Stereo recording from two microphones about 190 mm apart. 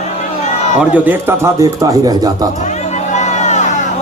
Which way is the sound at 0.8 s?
10° right (ahead or behind).